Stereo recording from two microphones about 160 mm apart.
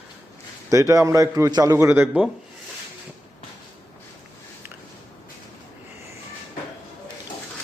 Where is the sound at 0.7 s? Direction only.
20° right (ahead or behind).